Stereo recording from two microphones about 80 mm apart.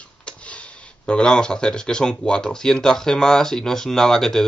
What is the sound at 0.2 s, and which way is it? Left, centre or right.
Speech, centre.